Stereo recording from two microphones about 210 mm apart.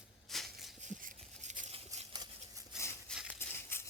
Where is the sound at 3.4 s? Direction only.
10° left (ahead or behind).